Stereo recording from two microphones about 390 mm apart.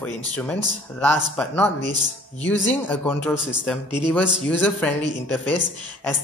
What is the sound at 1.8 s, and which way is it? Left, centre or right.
Speech, centre.